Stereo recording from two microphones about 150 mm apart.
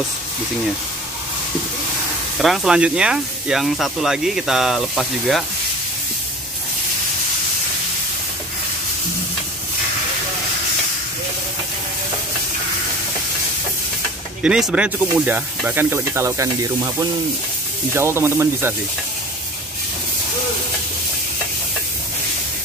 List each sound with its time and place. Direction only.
2.3 s speech: centre (ahead or behind)
14.4 s speech: 5° right (ahead or behind)